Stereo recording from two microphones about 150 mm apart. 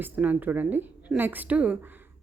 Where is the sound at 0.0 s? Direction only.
10° right (ahead or behind).